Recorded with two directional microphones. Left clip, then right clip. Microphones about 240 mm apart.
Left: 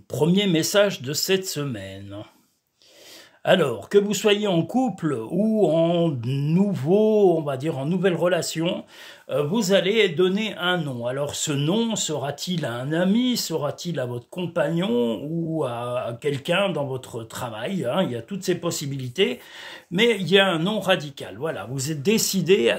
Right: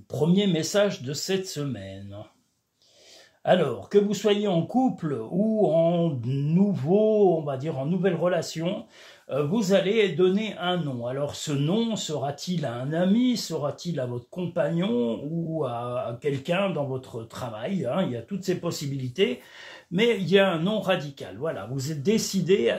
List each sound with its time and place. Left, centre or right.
0.1 s speech: left
3.4 s a man's voice: left